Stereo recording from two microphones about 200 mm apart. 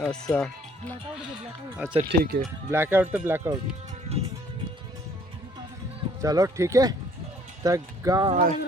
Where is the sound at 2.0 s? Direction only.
50° right (ahead or behind).